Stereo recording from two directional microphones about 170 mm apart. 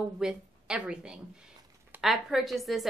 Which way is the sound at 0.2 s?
5° right (ahead or behind).